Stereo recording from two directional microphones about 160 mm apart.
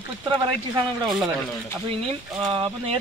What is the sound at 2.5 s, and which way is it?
Speech, 35° right (ahead or behind).